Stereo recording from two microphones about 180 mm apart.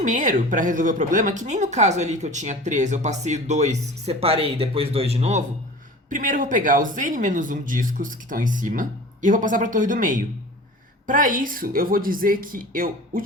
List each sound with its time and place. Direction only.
0.0 s speech: 45° right (ahead or behind)
6.1 s speech: 45° right (ahead or behind)